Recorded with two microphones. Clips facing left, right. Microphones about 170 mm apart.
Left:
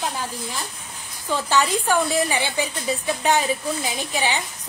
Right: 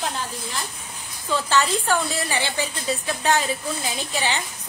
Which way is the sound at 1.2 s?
15° left (ahead or behind).